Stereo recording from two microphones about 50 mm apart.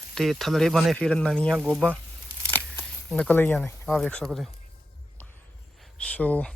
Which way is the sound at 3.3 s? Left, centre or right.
Left.